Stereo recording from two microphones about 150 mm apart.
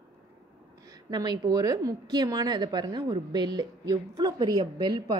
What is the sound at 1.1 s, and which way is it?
Speech, 25° right (ahead or behind).